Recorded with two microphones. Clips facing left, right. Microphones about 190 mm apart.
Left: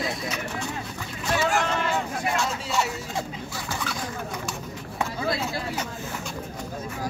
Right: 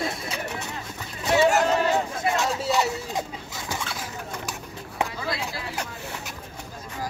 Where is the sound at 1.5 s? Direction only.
40° right (ahead or behind).